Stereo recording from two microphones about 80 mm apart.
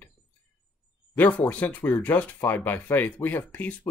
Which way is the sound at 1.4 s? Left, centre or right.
Centre.